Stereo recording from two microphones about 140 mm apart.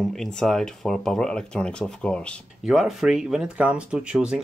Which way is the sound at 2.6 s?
5° right (ahead or behind).